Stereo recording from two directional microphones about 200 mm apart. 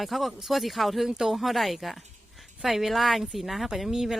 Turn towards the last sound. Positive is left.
turn(degrees=0)  # may be behind; listen again after turning